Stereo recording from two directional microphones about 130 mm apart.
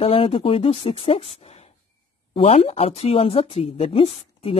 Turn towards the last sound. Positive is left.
turn(degrees=50)  # may be behind; listen again after turning